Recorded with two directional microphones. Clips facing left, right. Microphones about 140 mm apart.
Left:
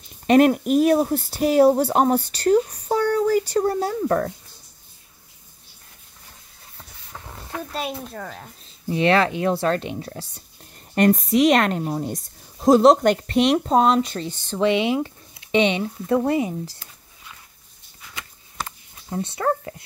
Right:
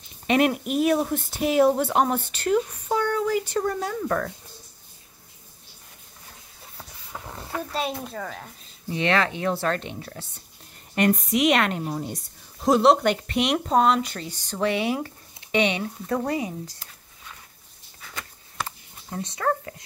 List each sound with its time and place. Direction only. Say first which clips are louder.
0.3 s speech: left 6 dB; 40° left (ahead or behind)
6.8 s vehicle: right 2 dB; 10° right (ahead or behind)
7.7 s speech: even; centre (ahead or behind)
8.9 s speech: left 5 dB; 35° left (ahead or behind)
14.6 s speech: left 5 dB; 20° left (ahead or behind)
19.2 s speech: left 2 dB; 30° left (ahead or behind)